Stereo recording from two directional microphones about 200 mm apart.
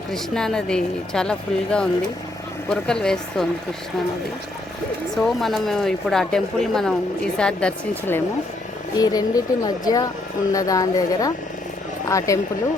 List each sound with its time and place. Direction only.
0.1 s speech: 5° left (ahead or behind)
5.1 s speech: centre (ahead or behind)
9.0 s speech: 20° left (ahead or behind)